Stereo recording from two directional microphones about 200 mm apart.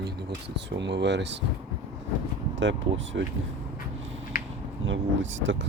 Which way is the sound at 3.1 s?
55° right (ahead or behind).